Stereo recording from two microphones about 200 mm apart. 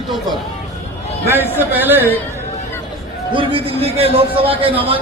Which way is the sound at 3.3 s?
25° right (ahead or behind).